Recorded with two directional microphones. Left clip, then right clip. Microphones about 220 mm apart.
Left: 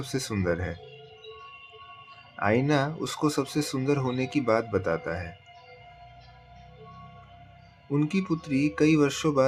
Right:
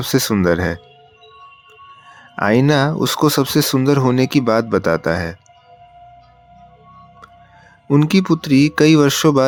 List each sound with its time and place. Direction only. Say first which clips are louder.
0.0 s speech: right 13 dB; 45° right (ahead or behind)
2.3 s speech: right 10 dB; 45° right (ahead or behind)
7.9 s speech: right 13 dB; 45° right (ahead or behind)